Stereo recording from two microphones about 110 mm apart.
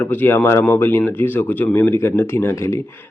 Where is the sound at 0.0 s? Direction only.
20° left (ahead or behind).